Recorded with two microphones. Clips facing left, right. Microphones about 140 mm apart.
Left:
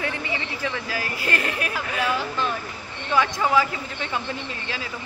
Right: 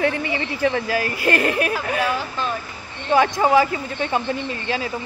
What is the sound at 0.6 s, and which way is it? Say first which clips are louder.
A woman's voice: right 8 dB; 50° right (ahead or behind).